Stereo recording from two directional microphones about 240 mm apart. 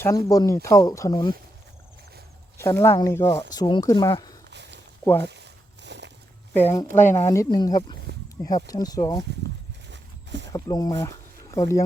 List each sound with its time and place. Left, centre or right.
0.0 s speech: centre
2.6 s speech: centre
4.5 s a sound: right
6.6 s speech: centre
9.9 s a sound: right
10.5 s speech: centre